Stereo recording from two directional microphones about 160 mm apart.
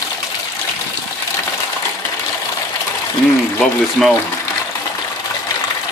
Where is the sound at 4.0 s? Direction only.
Centre (ahead or behind).